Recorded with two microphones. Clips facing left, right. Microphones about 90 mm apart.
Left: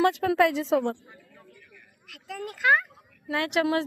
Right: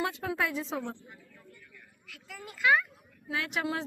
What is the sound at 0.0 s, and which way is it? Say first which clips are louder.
Speech: left 10 dB; 80° left.